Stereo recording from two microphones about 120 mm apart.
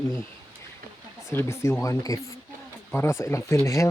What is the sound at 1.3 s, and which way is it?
Speech, 25° left (ahead or behind).